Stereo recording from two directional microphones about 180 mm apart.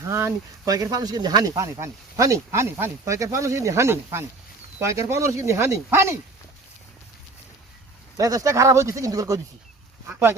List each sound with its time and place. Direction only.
0.0 s speech: 15° right (ahead or behind)
8.2 s speech: 20° right (ahead or behind)